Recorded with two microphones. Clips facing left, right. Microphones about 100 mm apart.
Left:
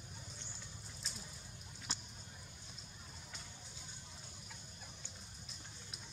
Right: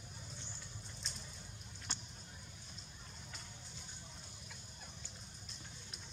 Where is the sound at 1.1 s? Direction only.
Centre (ahead or behind).